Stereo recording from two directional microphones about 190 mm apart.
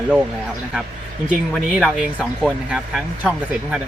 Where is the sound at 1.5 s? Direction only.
Centre (ahead or behind).